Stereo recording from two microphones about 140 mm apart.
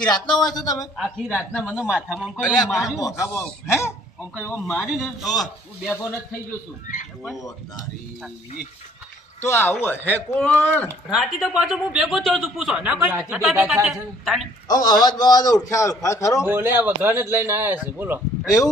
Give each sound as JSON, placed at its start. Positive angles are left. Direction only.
{"t": 0.3, "sound": "speech", "side_deg": 5}
{"t": 0.5, "sound": "a man's voice", "side_deg": 25}
{"t": 0.9, "sound": "speech", "side_deg": -5}
{"t": 3.0, "sound": "a man's voice", "side_deg": 20}
{"t": 4.8, "sound": "speech", "side_deg": 0}
{"t": 5.9, "sound": "speech", "side_deg": 15}
{"t": 6.8, "sound": "speech", "side_deg": 70}
{"t": 7.3, "sound": "a man's voice", "side_deg": 25}
{"t": 9.4, "sound": "speech", "side_deg": 15}
{"t": 11.1, "sound": "speech", "side_deg": -5}
{"t": 14.7, "sound": "a man's voice", "side_deg": 30}
{"t": 16.5, "sound": "speech", "side_deg": -15}
{"t": 18.4, "sound": "a man's voice", "side_deg": 25}